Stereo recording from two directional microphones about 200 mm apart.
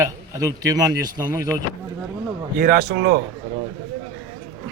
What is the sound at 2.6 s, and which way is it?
Speech, 45° right (ahead or behind).